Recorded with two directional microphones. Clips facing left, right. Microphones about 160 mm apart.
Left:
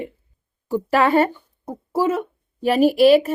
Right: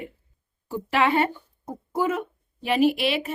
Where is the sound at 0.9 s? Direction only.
40° left (ahead or behind).